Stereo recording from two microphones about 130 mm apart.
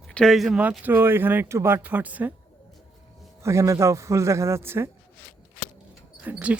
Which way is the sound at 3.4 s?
20° right (ahead or behind).